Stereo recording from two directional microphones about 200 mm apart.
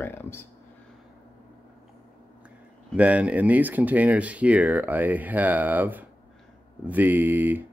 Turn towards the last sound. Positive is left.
turn(degrees=-10)  # may be behind; listen again after turning